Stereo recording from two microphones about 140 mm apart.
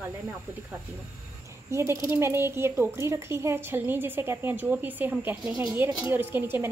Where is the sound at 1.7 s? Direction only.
20° right (ahead or behind).